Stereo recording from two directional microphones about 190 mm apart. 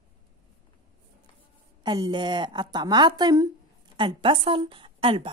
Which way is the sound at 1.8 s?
20° right (ahead or behind).